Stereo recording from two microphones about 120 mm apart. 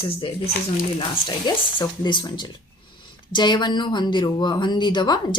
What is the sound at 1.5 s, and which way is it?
Speech, 40° left (ahead or behind).